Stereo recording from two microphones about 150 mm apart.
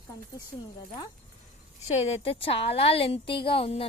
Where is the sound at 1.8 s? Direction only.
50° left (ahead or behind).